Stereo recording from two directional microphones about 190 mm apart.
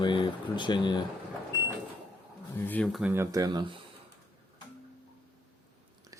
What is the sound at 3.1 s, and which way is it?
Speech, 15° right (ahead or behind).